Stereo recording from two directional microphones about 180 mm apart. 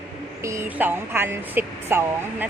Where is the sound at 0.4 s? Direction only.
15° right (ahead or behind).